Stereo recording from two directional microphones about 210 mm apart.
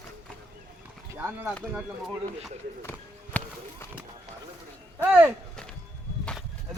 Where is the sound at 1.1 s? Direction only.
10° right (ahead or behind).